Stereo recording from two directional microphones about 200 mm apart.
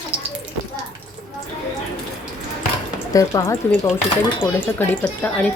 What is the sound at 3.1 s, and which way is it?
Speech, 15° left (ahead or behind).